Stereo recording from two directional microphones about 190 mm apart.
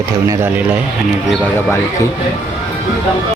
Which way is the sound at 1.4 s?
10° left (ahead or behind).